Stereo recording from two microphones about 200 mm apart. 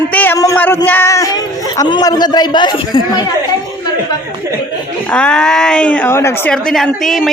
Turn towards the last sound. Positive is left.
turn(degrees=0)  # may be behind; listen again after turning